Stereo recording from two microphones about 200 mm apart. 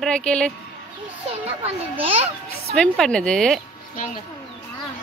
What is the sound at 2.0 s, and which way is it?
Speech, 30° right (ahead or behind).